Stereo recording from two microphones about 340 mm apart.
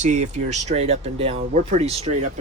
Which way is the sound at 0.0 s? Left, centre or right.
Right.